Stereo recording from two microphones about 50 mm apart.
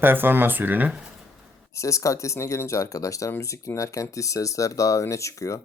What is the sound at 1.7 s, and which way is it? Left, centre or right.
Speech, left.